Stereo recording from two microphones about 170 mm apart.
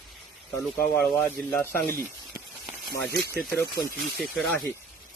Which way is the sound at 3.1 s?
65° left (ahead or behind).